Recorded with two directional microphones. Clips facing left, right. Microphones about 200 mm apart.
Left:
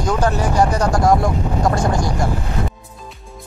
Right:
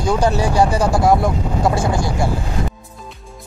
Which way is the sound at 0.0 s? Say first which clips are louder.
Right 2 dB; 10° right (ahead or behind).